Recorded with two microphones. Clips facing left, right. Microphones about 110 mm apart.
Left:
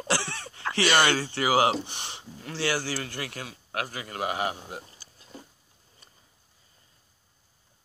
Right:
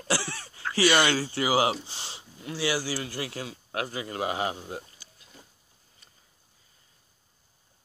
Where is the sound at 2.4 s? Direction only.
15° right (ahead or behind).